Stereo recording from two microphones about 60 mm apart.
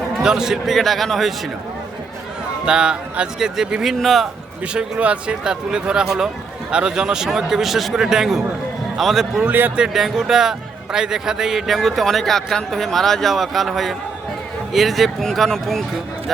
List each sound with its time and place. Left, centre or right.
0.2 s a man's voice: centre
2.6 s speech: centre
4.0 s a man's voice: centre
4.7 s a man's voice: centre
9.5 s a man's voice: right
9.7 s a man's voice: centre